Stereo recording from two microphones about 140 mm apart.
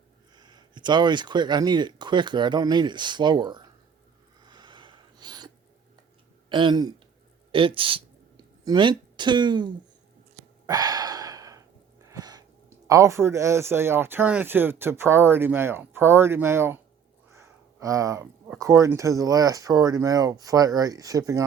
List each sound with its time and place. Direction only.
0.3 s speech: 30° right (ahead or behind)
4.4 s a sound: 30° right (ahead or behind)
6.5 s speech: 35° right (ahead or behind)
10.7 s gasp: 25° right (ahead or behind)
12.1 s speech: 25° right (ahead or behind)